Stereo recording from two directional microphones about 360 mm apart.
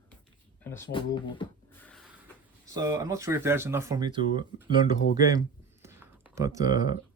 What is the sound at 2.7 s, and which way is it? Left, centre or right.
Speech, centre.